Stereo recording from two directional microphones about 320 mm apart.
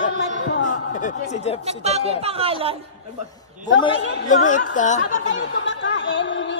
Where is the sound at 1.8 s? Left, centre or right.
Centre.